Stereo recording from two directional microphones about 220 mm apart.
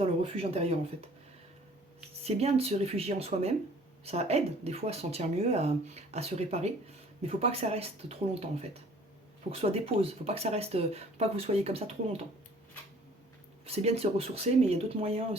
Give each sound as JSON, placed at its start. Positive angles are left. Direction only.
{"t": 0.0, "sound": "speech", "side_deg": -25}
{"t": 2.2, "sound": "speech", "side_deg": -30}
{"t": 13.7, "sound": "speech", "side_deg": -30}